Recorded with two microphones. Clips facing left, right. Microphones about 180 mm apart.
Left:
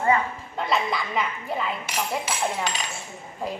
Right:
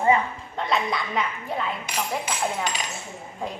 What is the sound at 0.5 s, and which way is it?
Dishes, centre (ahead or behind).